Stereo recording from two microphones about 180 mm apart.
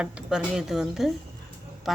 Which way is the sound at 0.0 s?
5° right (ahead or behind).